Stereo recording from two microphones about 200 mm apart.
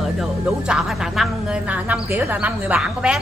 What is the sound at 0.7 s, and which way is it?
A woman's voice, centre (ahead or behind).